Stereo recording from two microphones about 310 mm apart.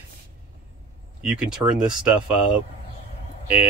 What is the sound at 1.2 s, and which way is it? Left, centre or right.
Speech, centre.